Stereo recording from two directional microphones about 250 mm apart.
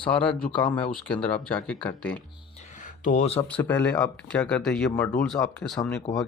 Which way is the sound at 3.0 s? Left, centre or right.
Left.